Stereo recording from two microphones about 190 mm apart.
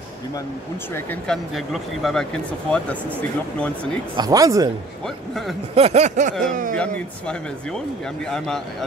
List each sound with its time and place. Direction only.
0.9 s speech: 5° left (ahead or behind)
4.2 s speech: 20° right (ahead or behind)
5.0 s speech: centre (ahead or behind)
5.8 s a sound: 35° right (ahead or behind)
6.8 s speech: 5° left (ahead or behind)